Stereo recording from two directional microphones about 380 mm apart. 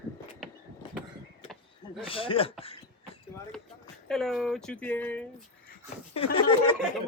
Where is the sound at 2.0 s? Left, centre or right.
Centre.